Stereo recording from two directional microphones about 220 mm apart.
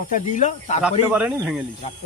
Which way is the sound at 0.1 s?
35° left (ahead or behind).